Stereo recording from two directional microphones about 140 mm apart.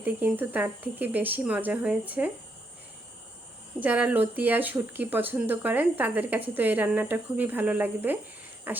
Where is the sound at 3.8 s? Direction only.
10° right (ahead or behind).